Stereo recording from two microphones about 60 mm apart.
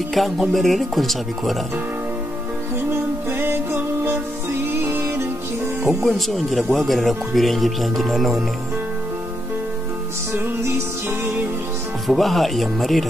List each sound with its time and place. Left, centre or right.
0.1 s speech: centre
2.9 s music: right
6.0 s speech: centre
10.3 s music: right
12.1 s speech: centre